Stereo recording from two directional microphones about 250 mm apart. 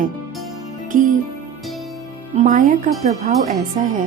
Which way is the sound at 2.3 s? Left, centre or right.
Right.